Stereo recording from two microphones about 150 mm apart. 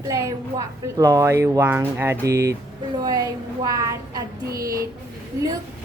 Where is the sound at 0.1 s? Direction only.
20° right (ahead or behind).